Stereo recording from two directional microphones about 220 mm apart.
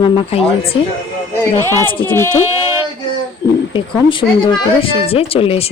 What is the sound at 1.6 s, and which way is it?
Speech, 15° right (ahead or behind).